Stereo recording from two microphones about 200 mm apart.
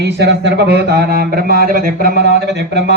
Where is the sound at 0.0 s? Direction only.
60° right (ahead or behind).